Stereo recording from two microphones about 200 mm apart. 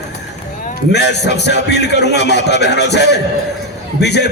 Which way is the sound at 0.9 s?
55° left (ahead or behind).